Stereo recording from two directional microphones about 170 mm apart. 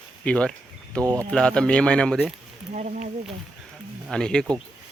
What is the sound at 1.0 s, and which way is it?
Speech, 20° right (ahead or behind).